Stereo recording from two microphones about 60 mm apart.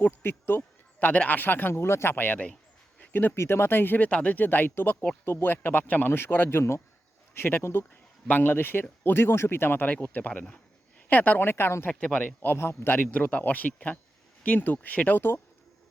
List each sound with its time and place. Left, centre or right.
0.0 s a man's voice: left
2.1 s speech: left
6.6 s a man's voice: left
11.9 s a man's voice: left
12.4 s a man's voice: left